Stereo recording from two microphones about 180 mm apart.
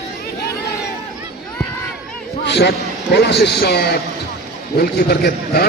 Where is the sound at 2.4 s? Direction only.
70° left (ahead or behind).